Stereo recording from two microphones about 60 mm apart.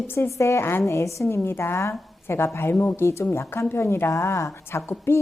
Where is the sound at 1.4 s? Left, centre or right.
Left.